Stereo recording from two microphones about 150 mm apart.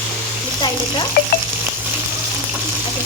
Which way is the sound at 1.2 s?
80° left.